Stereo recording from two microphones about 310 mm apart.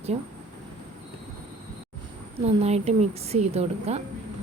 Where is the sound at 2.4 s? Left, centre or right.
Centre.